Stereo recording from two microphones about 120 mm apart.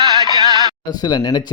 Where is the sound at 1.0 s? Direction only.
35° left (ahead or behind).